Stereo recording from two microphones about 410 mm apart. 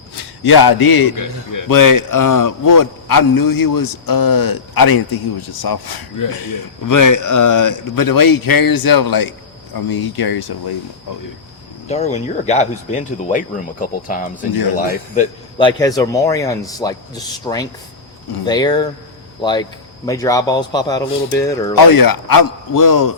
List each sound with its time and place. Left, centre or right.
0.2 s a man's voice: left
11.9 s speech: centre
21.8 s speech: left